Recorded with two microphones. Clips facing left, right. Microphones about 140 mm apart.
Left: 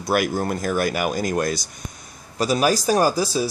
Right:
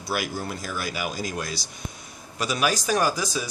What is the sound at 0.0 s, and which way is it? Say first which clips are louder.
Speech: left 8 dB; 55° left (ahead or behind).